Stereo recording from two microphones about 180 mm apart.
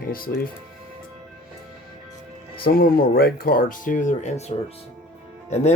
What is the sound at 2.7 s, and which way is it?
Speech, 55° left (ahead or behind).